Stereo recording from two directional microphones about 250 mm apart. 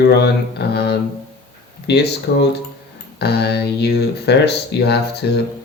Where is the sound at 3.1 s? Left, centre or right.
Left.